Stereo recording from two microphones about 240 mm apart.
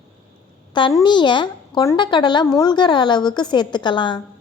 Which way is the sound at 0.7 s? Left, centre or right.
Centre.